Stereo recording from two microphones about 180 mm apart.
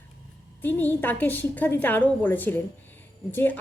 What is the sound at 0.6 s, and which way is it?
A woman's voice, 10° left (ahead or behind).